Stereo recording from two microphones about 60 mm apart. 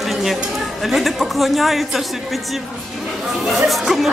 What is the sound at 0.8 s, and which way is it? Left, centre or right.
Speech, centre.